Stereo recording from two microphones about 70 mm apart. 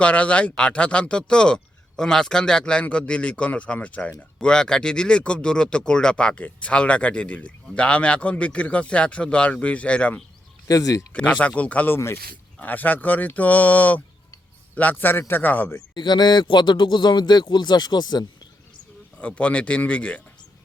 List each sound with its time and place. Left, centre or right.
0.0 s speech: centre
10.7 s speech: left
11.1 s speech: left
11.9 s speech: left
12.5 s speech: left
16.0 s speech: left
19.2 s speech: left